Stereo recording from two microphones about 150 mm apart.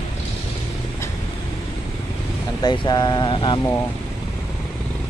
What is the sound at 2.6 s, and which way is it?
Speech, 30° left (ahead or behind).